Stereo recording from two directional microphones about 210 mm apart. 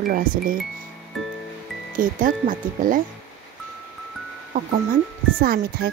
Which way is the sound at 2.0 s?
40° right (ahead or behind).